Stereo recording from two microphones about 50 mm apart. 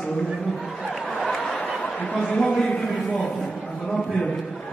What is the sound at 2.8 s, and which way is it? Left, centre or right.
Speech, centre.